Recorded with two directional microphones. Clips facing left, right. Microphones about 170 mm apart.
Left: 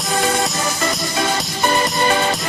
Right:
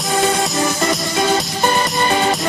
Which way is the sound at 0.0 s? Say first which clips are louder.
Right 2 dB; centre (ahead or behind).